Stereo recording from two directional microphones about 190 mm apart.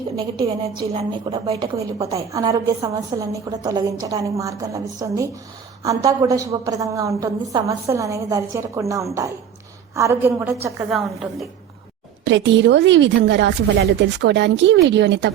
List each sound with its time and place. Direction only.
0.8 s a woman's voice: 25° right (ahead or behind)
2.1 s a woman's voice: 15° right (ahead or behind)
10.9 s a woman's voice: centre (ahead or behind)
12.2 s a woman's voice: 70° right (ahead or behind)